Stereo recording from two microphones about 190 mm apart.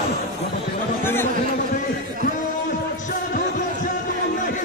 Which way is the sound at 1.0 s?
10° left (ahead or behind).